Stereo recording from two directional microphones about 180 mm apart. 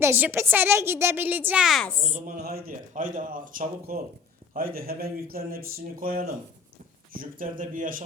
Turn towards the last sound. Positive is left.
turn(degrees=-50)  # may be behind; listen again after turning